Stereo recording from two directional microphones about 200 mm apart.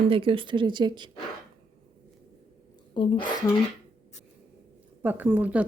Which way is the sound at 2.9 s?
25° left (ahead or behind).